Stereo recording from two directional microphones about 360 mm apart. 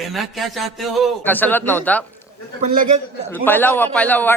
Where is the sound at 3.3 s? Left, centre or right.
Centre.